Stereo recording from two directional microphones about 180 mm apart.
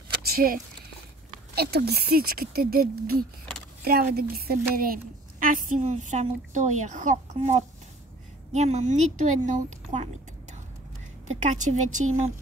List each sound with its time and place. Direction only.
0.2 s a sound: 55° right (ahead or behind)
1.5 s a woman's voice: 60° right (ahead or behind); by 7.5 s 45° right (ahead or behind)
8.5 s a woman's voice: 40° right (ahead or behind)
11.4 s a woman's voice: 45° right (ahead or behind)